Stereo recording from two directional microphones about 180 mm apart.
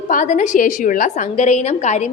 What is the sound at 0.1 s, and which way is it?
A woman's voice, 45° left (ahead or behind).